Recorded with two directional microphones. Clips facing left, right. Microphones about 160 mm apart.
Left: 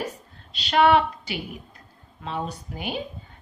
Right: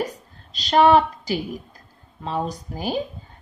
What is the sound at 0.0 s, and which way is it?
A woman's voice, 40° right (ahead or behind).